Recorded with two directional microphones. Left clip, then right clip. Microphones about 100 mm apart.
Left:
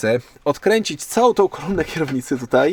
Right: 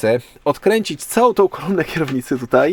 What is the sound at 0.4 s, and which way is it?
Speech, 25° left (ahead or behind).